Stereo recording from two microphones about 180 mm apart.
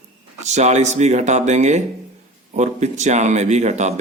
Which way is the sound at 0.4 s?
40° right (ahead or behind).